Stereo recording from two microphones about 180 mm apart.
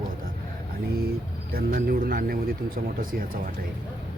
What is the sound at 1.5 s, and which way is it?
Speech, 55° right (ahead or behind).